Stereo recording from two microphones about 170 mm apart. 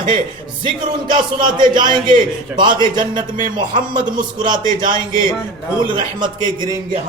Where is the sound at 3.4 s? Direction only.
50° right (ahead or behind).